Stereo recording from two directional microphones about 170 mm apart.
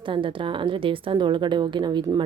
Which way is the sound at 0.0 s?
30° right (ahead or behind).